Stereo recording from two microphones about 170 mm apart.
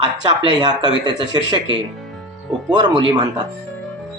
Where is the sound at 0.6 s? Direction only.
25° right (ahead or behind).